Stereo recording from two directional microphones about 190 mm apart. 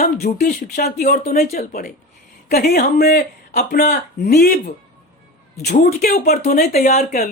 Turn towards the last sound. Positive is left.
turn(degrees=50)  # may be behind; listen again after turning